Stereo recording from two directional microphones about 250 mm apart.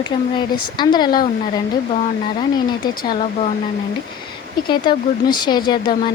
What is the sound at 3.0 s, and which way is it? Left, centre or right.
Speech, left.